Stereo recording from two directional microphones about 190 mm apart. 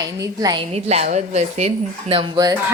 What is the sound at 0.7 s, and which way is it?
Speech, 35° right (ahead or behind).